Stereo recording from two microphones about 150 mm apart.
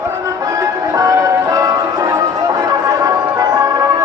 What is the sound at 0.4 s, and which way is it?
Music, 20° right (ahead or behind).